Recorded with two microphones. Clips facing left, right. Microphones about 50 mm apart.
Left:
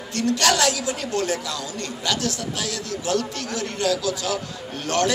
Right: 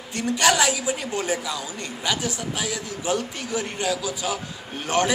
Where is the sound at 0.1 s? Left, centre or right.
Centre.